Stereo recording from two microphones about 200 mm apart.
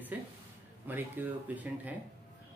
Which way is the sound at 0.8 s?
10° right (ahead or behind).